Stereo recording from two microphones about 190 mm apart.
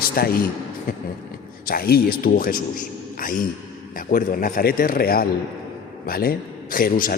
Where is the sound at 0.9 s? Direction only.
45° left (ahead or behind).